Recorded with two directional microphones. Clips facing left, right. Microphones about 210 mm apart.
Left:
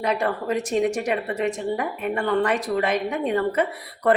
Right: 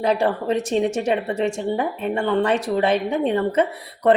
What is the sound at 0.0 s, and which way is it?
Speech, 30° right (ahead or behind).